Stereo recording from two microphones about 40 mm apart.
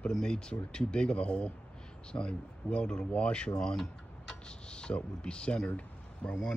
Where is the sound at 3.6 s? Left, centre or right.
Centre.